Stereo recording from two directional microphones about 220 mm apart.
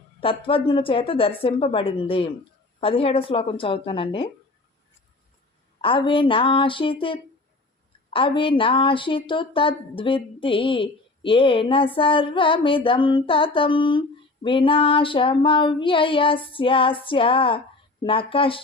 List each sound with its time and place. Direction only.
0.2 s speech: 25° left (ahead or behind)
5.8 s speech: 25° left (ahead or behind)